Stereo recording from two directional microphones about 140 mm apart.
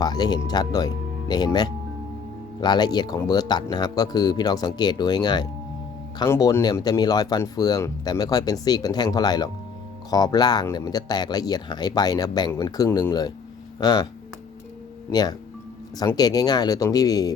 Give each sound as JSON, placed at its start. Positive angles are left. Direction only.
{"t": 0.0, "sound": "speech", "side_deg": 30}
{"t": 2.6, "sound": "speech", "side_deg": 30}
{"t": 6.2, "sound": "speech", "side_deg": 20}
{"t": 15.1, "sound": "speech", "side_deg": 30}